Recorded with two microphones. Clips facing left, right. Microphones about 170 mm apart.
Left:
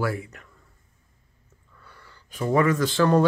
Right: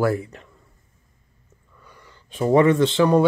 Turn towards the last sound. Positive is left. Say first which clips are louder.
# right 3 dB
turn(degrees=-15)  # may be behind; listen again after turning